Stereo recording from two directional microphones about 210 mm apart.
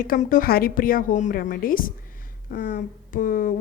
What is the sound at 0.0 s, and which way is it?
Speech, 40° left (ahead or behind).